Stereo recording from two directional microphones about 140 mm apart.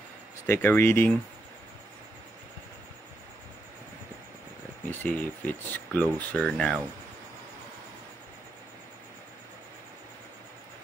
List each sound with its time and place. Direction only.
0.5 s speech: 15° left (ahead or behind)
5.0 s speech: 10° left (ahead or behind)